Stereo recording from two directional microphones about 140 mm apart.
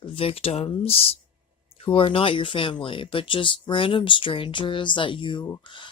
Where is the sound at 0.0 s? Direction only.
40° left (ahead or behind).